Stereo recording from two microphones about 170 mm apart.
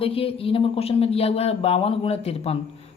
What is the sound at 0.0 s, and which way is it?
A man's voice, 35° left (ahead or behind).